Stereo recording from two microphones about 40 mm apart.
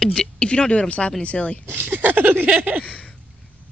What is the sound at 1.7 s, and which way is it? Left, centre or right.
Speech, right.